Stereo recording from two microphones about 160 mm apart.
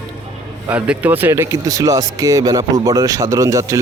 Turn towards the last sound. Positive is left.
turn(degrees=-20)  # may be behind; listen again after turning